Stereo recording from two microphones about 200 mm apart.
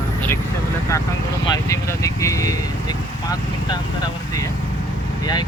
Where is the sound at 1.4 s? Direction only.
15° left (ahead or behind).